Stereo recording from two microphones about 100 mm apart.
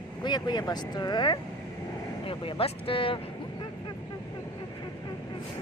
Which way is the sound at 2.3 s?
70° left (ahead or behind).